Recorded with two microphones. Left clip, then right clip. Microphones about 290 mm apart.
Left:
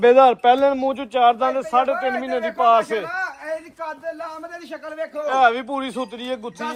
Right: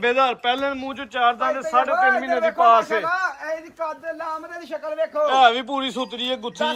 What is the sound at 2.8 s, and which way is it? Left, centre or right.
Speech, centre.